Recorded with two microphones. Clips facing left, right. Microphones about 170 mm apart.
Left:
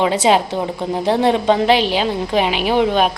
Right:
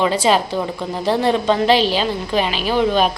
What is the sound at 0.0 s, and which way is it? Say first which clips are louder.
A woman's voice: left 2 dB; 20° left (ahead or behind).